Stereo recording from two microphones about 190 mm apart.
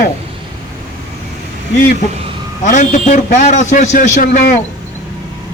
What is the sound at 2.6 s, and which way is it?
A man's voice, 40° left (ahead or behind).